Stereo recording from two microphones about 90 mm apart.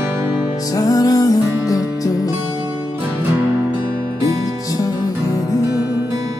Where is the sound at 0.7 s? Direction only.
40° left (ahead or behind).